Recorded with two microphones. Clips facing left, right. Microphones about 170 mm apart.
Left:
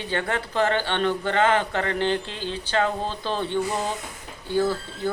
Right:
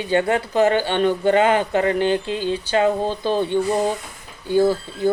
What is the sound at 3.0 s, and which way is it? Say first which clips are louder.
Speech: right 7 dB; 50° right (ahead or behind).